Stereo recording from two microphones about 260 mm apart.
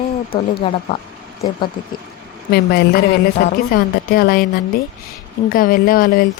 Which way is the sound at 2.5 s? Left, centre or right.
Left.